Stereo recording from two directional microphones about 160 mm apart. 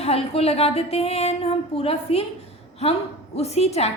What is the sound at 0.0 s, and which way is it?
A woman's voice, 40° left (ahead or behind).